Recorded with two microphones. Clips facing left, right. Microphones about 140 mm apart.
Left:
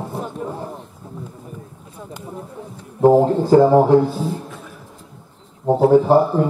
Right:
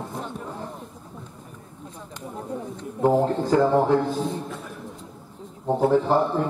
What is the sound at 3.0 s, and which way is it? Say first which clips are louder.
Speech: left 7 dB; 30° left (ahead or behind).